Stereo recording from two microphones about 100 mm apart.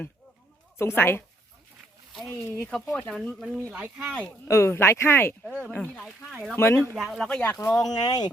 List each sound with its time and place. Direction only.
0.8 s speech: 25° left (ahead or behind)
2.9 s speech: 5° left (ahead or behind)
3.7 s speech: 10° right (ahead or behind)
4.0 s speech: 10° left (ahead or behind)
4.4 s speech: 25° left (ahead or behind)
5.7 s speech: 10° left (ahead or behind)
6.6 s speech: 25° left (ahead or behind)
6.9 s speech: centre (ahead or behind)
7.6 s speech: 30° left (ahead or behind)